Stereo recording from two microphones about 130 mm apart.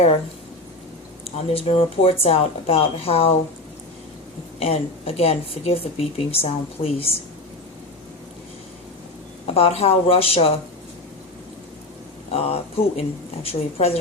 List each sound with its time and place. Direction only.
1.2 s speech: 50° left (ahead or behind)
4.6 s speech: 50° left (ahead or behind)
9.6 s speech: 50° left (ahead or behind)
12.3 s speech: 50° left (ahead or behind)